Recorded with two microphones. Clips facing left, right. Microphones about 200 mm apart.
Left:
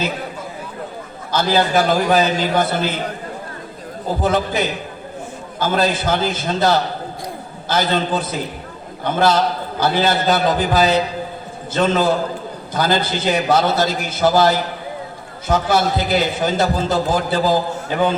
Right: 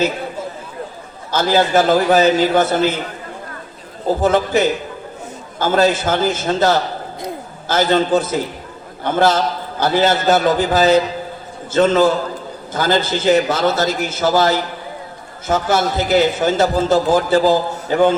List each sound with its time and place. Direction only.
1.3 s a man's voice: 45° right (ahead or behind)
4.2 s a man's voice: 45° right (ahead or behind)
15.4 s a man's voice: 45° right (ahead or behind)